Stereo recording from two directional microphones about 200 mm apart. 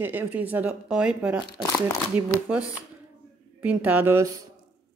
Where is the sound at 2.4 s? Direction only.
5° right (ahead or behind).